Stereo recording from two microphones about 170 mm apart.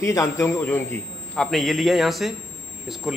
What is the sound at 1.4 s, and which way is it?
Speech, centre (ahead or behind).